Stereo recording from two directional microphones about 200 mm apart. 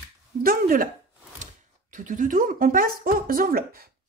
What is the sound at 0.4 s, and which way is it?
Speech, 45° right (ahead or behind).